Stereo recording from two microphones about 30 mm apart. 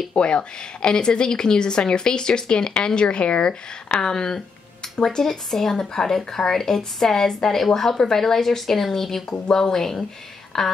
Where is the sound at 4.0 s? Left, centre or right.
Left.